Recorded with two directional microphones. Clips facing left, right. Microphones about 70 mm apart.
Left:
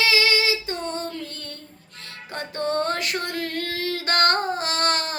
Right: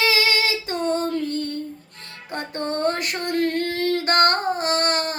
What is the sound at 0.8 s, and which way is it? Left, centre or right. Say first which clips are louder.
Female singing: right 7 dB; right.